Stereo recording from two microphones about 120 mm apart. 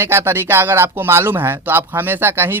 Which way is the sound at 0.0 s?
20° right (ahead or behind).